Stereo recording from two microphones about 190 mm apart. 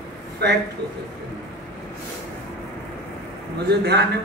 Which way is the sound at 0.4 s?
60° right (ahead or behind).